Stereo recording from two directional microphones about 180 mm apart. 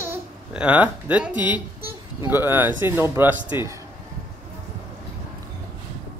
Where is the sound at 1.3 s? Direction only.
25° left (ahead or behind).